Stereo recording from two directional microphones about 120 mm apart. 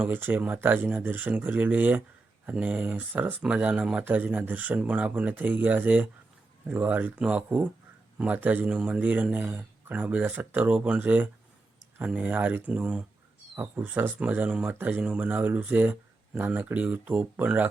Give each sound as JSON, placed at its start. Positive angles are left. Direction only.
{"t": 0.0, "sound": "speech", "side_deg": -15}